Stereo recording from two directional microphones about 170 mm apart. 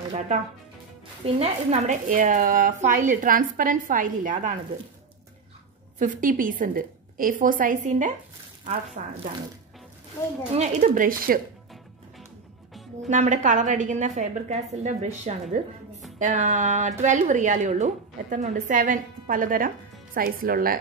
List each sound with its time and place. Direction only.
1.2 s speech: 40° right (ahead or behind)
5.9 s speech: 50° right (ahead or behind)
10.6 s speech: 45° right (ahead or behind)
13.1 s speech: 45° right (ahead or behind)